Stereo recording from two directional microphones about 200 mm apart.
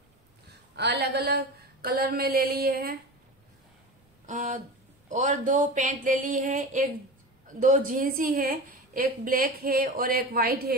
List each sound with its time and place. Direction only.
0.7 s a woman's voice: 55° right (ahead or behind)
4.3 s a woman's voice: 40° right (ahead or behind)